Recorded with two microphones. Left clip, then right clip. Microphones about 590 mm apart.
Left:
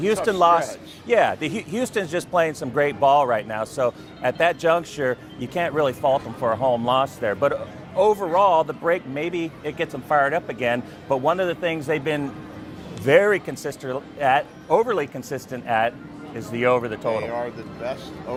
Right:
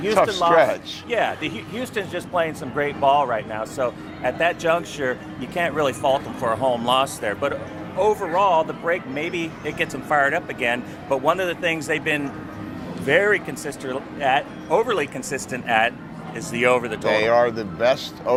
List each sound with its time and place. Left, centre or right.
0.3 s speech: left
17.1 s speech: right